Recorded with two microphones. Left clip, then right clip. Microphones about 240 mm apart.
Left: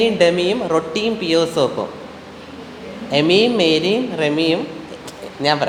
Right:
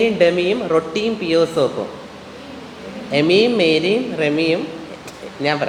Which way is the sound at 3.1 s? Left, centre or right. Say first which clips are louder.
Even; centre.